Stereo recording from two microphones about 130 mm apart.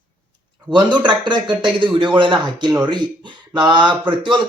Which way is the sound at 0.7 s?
35° right (ahead or behind).